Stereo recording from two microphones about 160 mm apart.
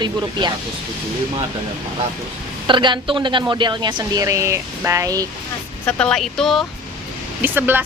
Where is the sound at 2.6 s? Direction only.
30° right (ahead or behind).